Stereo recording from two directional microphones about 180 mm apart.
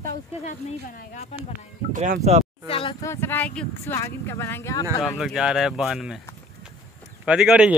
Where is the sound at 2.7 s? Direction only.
30° left (ahead or behind).